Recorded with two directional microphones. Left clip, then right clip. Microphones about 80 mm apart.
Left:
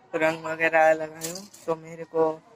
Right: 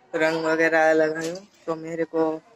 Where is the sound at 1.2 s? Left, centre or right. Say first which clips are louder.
Right 6 dB; right.